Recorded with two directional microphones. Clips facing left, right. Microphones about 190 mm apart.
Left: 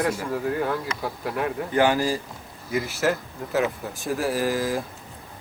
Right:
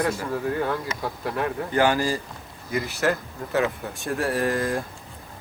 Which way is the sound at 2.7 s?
Centre (ahead or behind).